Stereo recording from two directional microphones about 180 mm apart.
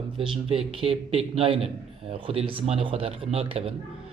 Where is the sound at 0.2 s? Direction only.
30° right (ahead or behind).